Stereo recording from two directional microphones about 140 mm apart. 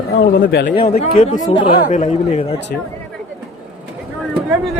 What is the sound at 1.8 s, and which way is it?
Speech, 60° left (ahead or behind).